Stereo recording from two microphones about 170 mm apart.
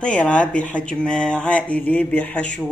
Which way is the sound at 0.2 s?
5° left (ahead or behind).